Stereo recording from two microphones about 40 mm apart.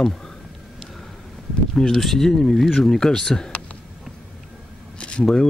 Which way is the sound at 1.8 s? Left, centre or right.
Centre.